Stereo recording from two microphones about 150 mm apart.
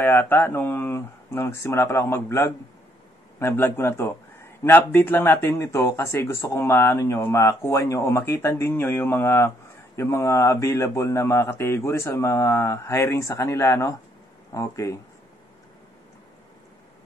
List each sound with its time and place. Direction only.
0.0 s speech: 15° left (ahead or behind)